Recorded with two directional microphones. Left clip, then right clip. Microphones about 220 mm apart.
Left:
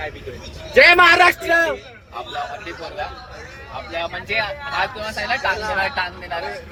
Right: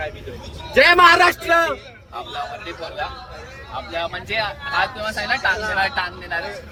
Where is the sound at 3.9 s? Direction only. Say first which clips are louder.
Left 1 dB; 10° left (ahead or behind).